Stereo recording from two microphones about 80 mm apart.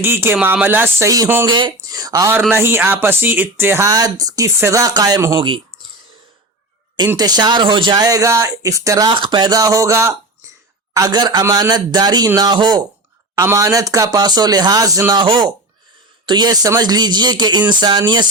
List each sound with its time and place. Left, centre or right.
0.0 s speech: right
1.0 s speech: right
1.5 s speech: right
2.5 s speech: right
3.8 s speech: right
5.4 s speech: right
7.2 s speech: right
9.0 s speech: right
10.9 s speech: right
11.4 s speech: right
11.7 s speech: right
13.4 s speech: right
14.2 s speech: right
15.1 s speech: right